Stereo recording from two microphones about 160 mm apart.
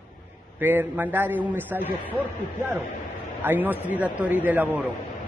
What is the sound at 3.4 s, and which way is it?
Speech, 10° right (ahead or behind).